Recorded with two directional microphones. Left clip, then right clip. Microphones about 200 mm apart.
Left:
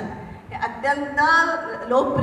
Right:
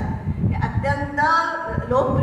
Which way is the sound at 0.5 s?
40° left (ahead or behind).